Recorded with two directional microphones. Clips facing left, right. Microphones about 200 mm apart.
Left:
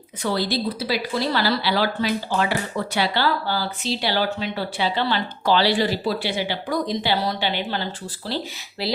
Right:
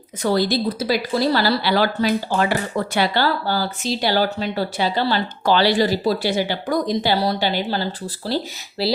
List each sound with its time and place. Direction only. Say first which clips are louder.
0.2 s speech: right 4 dB; 45° right (ahead or behind)